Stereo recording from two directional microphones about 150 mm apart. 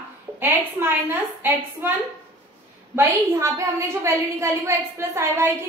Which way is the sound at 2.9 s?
15° right (ahead or behind).